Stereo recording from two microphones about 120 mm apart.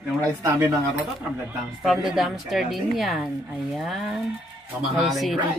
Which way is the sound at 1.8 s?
Centre (ahead or behind).